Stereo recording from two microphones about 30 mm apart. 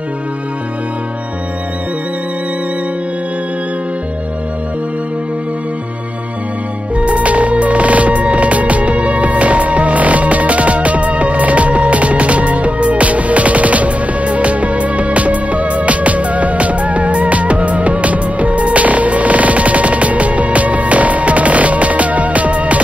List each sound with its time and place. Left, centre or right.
7.0 s music: right